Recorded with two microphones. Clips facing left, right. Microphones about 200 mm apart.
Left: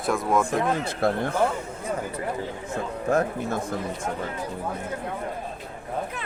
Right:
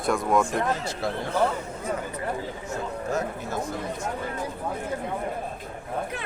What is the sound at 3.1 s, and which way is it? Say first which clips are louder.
Speech: left 7 dB; 55° left (ahead or behind).